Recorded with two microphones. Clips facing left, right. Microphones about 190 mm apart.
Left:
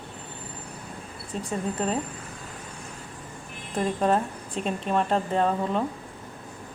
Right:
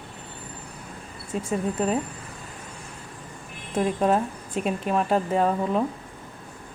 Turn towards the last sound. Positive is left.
turn(degrees=-5)  # may be behind; listen again after turning